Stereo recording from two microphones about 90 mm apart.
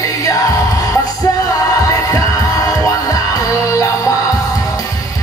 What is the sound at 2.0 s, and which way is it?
Music, 40° left (ahead or behind).